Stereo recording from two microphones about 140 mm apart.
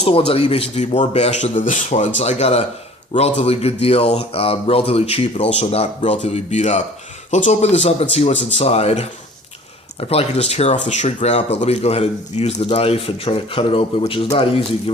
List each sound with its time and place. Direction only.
0.0 s speech: 45° left (ahead or behind)